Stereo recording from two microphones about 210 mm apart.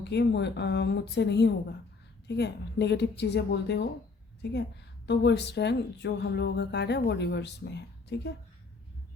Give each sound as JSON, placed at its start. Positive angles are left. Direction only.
{"t": 0.0, "sound": "speech", "side_deg": 55}